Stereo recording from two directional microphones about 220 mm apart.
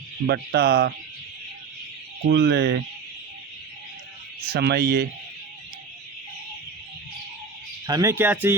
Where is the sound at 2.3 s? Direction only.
50° right (ahead or behind).